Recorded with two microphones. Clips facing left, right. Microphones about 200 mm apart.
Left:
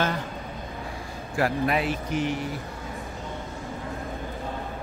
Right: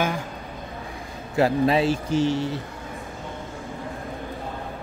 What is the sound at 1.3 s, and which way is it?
Speech, 25° right (ahead or behind).